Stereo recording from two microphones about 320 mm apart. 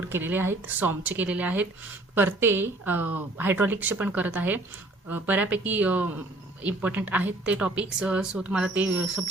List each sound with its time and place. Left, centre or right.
0.1 s a woman's voice: centre